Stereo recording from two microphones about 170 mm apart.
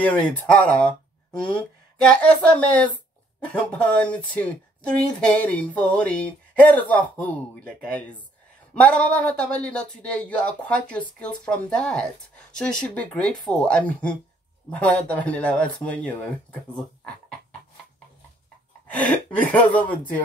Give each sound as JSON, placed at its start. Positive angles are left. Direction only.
{"t": 0.0, "sound": "speech", "side_deg": 10}
{"t": 18.9, "sound": "speech", "side_deg": 10}